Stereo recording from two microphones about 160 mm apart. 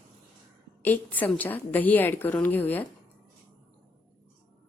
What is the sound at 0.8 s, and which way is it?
A woman's voice, 10° left (ahead or behind).